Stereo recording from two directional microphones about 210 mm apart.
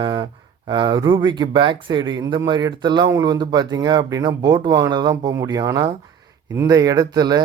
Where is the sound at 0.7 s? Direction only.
20° right (ahead or behind).